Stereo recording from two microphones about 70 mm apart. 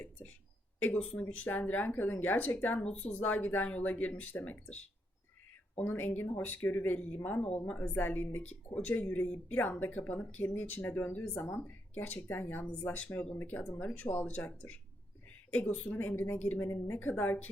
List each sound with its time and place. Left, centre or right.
0.9 s speech: centre
1.5 s speech: left
5.8 s speech: left
12.6 s speech: centre
16.6 s speech: left